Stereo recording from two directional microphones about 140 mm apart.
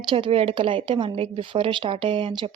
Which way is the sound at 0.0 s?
35° right (ahead or behind).